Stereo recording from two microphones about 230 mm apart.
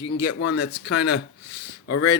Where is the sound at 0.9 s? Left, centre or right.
Centre.